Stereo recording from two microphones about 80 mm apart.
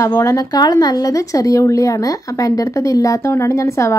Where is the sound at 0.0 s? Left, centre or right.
Left.